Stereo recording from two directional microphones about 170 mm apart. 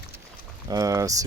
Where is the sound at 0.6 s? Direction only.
20° right (ahead or behind).